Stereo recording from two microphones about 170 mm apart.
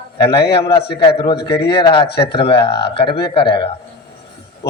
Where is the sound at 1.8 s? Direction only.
30° left (ahead or behind).